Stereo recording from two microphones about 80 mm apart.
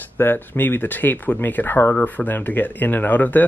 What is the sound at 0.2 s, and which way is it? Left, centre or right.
Speech, left.